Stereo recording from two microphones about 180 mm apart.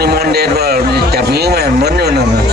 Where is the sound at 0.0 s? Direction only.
60° right (ahead or behind).